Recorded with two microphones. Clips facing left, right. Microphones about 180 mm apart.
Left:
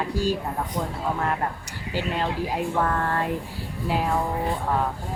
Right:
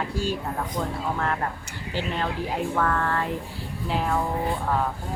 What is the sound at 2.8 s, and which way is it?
Speech, 25° left (ahead or behind).